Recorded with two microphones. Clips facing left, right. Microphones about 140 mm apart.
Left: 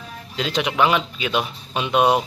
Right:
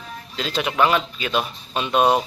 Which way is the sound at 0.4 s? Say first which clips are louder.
Left 1 dB; 15° left (ahead or behind).